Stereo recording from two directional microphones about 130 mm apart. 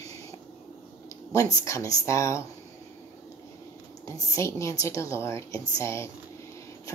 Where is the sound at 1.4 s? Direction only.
25° left (ahead or behind).